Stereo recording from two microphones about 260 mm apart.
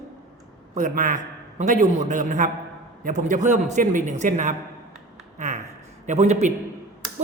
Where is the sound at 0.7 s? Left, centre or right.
Right.